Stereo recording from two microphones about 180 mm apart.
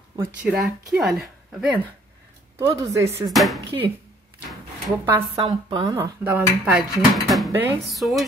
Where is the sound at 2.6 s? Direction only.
15° right (ahead or behind).